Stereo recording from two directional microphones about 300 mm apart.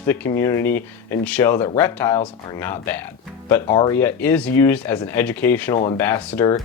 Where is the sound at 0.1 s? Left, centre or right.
Centre.